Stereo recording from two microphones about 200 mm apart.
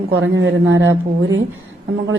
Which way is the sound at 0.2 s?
70° right (ahead or behind).